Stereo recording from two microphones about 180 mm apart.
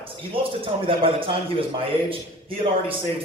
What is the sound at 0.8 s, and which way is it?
Speech, 30° right (ahead or behind).